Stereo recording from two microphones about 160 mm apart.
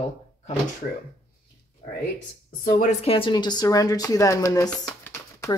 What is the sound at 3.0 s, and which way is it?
Speech, 35° left (ahead or behind).